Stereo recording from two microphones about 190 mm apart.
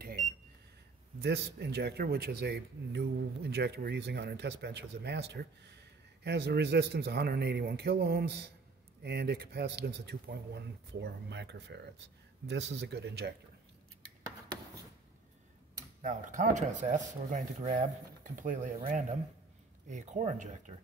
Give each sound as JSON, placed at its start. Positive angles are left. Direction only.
{"t": 1.2, "sound": "speech", "side_deg": -60}
{"t": 16.0, "sound": "speech", "side_deg": -40}